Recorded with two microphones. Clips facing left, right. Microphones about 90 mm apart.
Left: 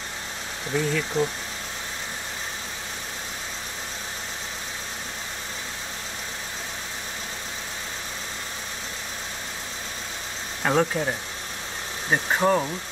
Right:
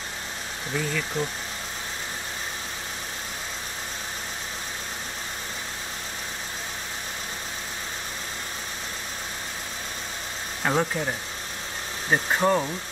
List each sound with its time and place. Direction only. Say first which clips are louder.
0.7 s speech: left 4 dB; 5° left (ahead or behind)
10.6 s speech: left 2 dB; centre (ahead or behind)